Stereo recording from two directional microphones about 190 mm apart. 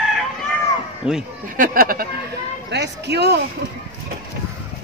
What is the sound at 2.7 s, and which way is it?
Speech, 65° right (ahead or behind).